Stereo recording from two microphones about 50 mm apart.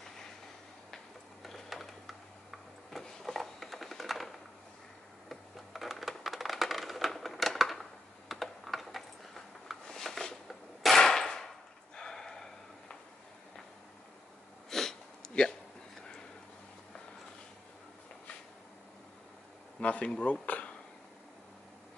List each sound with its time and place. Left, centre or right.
0.9 s a sound: centre
8.3 s typing: centre
9.8 s cap gun: centre
14.7 s sniff: centre
19.8 s speech: left
20.4 s a sound: left